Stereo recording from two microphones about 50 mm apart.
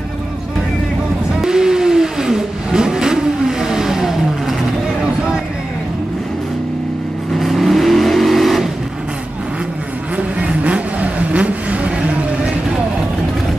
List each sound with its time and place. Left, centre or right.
1.4 s vehicle: centre
7.3 s vehicle: centre
10.1 s vehicle: right